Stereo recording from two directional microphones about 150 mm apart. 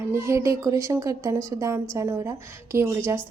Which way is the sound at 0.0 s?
20° right (ahead or behind).